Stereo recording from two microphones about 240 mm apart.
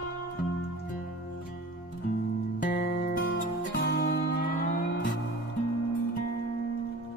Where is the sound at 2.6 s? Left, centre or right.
Left.